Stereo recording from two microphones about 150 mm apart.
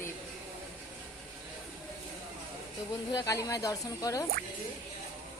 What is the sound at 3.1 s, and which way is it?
Speech, 20° left (ahead or behind).